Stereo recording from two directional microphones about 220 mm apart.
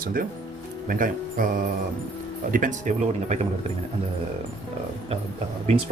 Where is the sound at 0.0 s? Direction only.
40° right (ahead or behind).